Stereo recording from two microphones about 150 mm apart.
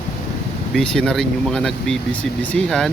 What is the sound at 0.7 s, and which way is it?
Speech, 5° left (ahead or behind).